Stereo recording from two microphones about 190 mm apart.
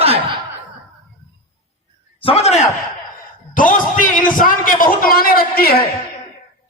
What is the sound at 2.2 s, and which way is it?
A man's voice, 35° left (ahead or behind).